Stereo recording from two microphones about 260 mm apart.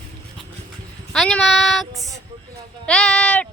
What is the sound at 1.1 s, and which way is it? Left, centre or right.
Child singing, centre.